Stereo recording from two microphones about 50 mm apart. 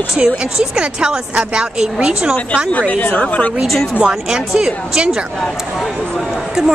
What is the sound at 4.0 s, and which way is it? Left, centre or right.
Speech, centre.